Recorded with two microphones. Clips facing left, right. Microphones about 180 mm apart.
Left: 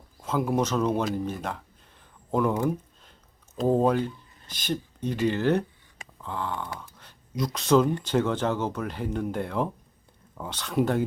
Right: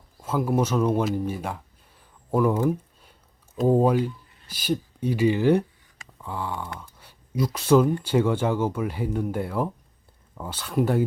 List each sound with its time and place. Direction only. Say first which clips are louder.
0.2 s speech: right 2 dB; 10° right (ahead or behind)
2.3 s a sound: right 3 dB; 10° right (ahead or behind)
4.4 s speech: right 4 dB; 10° right (ahead or behind)